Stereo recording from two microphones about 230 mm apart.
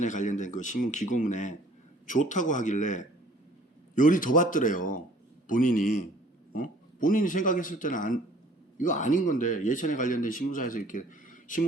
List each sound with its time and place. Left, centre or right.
0.0 s speech: left